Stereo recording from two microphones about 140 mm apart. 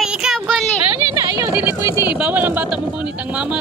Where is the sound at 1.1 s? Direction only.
25° right (ahead or behind).